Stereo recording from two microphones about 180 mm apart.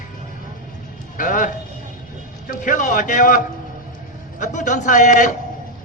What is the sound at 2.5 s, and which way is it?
A man's voice, 45° left (ahead or behind).